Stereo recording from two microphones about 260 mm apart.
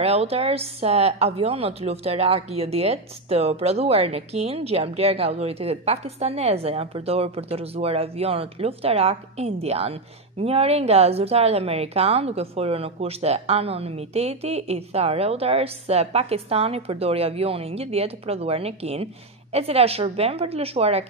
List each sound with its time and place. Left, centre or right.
0.0 s a woman's voice: right